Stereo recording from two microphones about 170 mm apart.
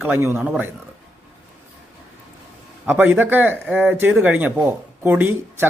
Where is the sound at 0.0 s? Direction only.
10° right (ahead or behind).